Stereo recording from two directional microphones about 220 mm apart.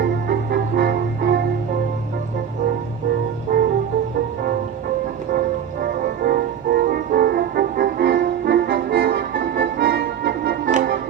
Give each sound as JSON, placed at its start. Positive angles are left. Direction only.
{"t": 0.0, "sound": "music", "side_deg": -45}
{"t": 3.5, "sound": "music", "side_deg": -40}
{"t": 5.3, "sound": "music", "side_deg": -45}
{"t": 10.7, "sound": "music", "side_deg": -35}